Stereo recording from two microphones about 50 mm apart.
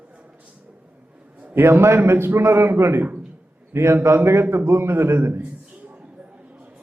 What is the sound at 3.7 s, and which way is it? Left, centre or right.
Speech, right.